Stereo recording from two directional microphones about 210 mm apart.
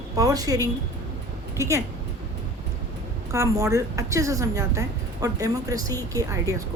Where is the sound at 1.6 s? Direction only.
15° right (ahead or behind).